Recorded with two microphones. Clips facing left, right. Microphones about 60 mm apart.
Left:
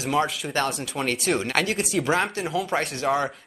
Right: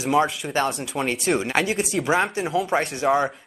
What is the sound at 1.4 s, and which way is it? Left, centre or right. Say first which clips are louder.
Speech: right 2 dB; centre.